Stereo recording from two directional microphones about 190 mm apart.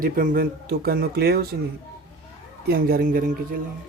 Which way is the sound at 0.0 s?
45° right (ahead or behind).